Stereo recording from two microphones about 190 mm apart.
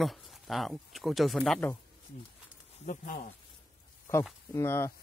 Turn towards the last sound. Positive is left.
turn(degrees=15)  # may be behind; listen again after turning